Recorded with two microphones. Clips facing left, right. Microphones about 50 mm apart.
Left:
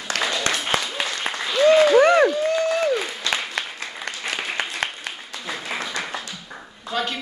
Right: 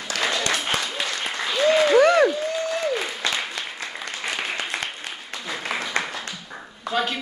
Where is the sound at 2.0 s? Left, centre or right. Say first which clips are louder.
Left 1 dB; centre.